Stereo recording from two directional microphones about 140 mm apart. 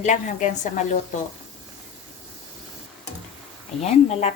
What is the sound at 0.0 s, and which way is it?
A woman's voice, 60° left (ahead or behind).